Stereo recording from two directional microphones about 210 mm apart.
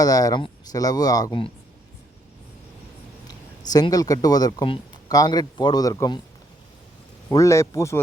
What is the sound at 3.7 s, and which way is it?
Speech, 15° left (ahead or behind).